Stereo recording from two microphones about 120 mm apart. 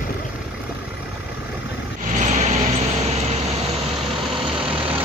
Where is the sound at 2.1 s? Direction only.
80° right.